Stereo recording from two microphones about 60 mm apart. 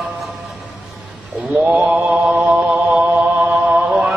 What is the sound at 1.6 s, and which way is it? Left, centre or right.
Mantra, centre.